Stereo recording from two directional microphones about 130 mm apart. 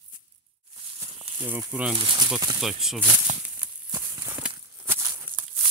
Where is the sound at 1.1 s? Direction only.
50° right (ahead or behind).